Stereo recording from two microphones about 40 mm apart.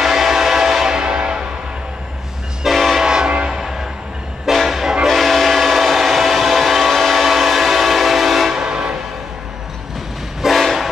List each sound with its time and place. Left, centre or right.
0.0 s train: centre
1.0 s music: right
2.6 s train: centre
3.1 s train: centre
3.4 s music: centre
5.0 s train: centre
8.5 s train: right
10.5 s train: centre